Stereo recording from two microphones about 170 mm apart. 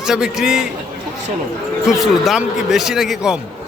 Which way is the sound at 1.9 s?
Centre (ahead or behind).